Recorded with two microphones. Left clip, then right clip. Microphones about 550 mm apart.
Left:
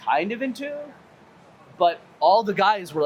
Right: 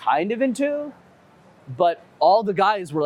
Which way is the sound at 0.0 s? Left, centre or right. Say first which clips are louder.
Right 3 dB; right.